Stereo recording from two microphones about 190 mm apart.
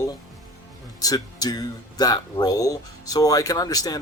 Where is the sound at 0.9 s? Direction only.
20° left (ahead or behind).